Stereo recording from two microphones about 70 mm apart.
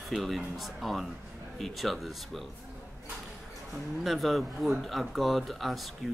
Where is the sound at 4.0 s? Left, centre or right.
Centre.